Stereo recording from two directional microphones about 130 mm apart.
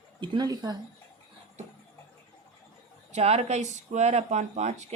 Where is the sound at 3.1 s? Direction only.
55° right (ahead or behind).